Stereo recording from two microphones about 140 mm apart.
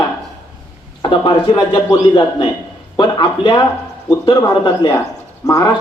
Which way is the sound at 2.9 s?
30° left (ahead or behind).